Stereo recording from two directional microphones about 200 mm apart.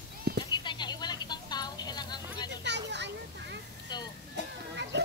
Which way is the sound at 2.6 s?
60° right (ahead or behind).